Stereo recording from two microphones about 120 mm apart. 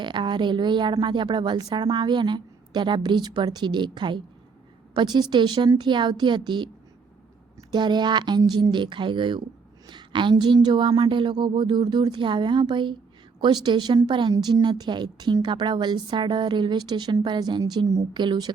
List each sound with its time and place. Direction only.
0.0 s a woman's voice: 40° right (ahead or behind)
7.7 s a woman's voice: 40° right (ahead or behind)